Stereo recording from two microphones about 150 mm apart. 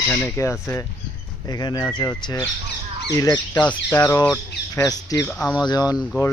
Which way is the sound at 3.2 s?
25° left (ahead or behind).